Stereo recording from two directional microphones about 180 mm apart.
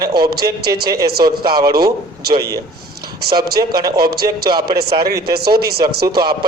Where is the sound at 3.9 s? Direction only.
60° right (ahead or behind).